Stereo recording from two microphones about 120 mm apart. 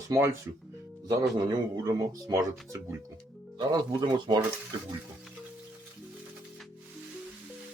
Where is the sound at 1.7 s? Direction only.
35° right (ahead or behind).